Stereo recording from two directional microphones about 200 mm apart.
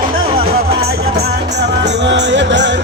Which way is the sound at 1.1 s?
55° right (ahead or behind).